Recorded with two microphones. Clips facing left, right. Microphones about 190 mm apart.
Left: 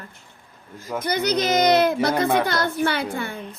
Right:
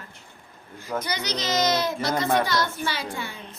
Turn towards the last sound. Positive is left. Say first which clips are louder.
# left 6 dB
turn(degrees=55)  # may be behind; listen again after turning